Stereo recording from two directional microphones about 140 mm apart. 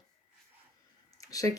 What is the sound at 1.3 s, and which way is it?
Speech, 25° left (ahead or behind).